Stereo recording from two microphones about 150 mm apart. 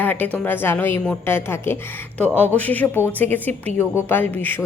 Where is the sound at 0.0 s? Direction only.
10° left (ahead or behind).